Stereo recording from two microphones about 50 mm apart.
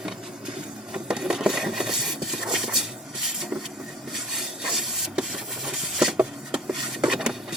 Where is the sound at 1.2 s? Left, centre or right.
Centre.